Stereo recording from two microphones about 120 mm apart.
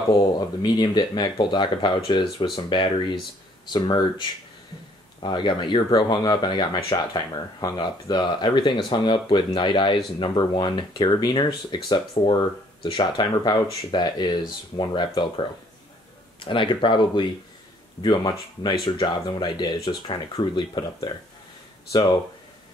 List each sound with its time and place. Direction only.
0.1 s speech: 35° left (ahead or behind)